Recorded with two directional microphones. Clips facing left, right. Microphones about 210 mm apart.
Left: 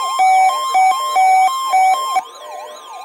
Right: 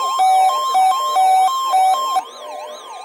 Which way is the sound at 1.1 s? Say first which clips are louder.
Left 2 dB; 15° left (ahead or behind).